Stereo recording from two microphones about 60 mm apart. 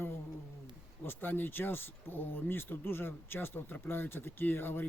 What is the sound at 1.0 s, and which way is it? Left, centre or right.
Speech, left.